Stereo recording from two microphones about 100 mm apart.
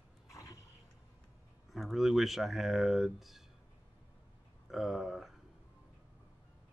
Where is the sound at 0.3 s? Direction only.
35° left (ahead or behind).